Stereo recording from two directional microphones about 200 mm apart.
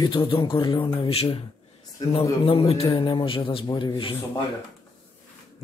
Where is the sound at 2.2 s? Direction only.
20° left (ahead or behind).